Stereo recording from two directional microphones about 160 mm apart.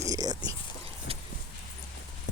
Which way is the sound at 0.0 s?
25° right (ahead or behind).